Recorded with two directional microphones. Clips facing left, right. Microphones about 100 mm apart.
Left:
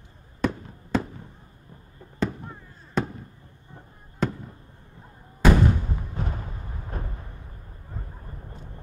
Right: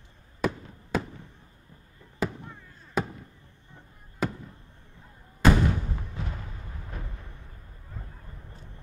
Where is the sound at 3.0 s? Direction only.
5° right (ahead or behind).